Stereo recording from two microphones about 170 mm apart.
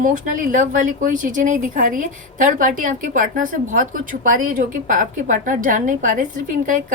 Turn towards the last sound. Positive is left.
turn(degrees=-50)  # may be behind; listen again after turning